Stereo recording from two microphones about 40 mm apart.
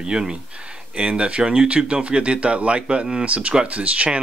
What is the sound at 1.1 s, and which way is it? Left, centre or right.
Speech, right.